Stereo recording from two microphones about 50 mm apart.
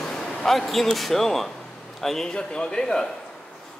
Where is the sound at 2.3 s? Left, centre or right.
Centre.